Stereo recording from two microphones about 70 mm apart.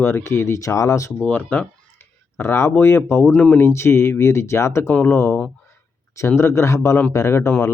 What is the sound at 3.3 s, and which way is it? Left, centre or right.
Speech, centre.